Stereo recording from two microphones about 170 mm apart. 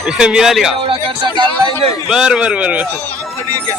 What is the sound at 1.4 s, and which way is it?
Speech, 30° right (ahead or behind).